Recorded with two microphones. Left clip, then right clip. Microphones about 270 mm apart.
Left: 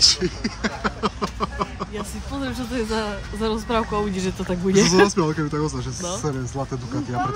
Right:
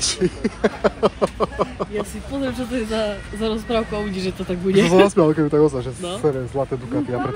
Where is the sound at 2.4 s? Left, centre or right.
Left.